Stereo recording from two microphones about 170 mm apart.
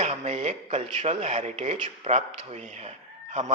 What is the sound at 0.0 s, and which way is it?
A man's voice, 40° right (ahead or behind).